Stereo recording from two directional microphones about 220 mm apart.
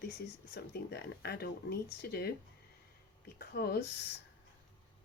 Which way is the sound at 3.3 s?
45° left (ahead or behind).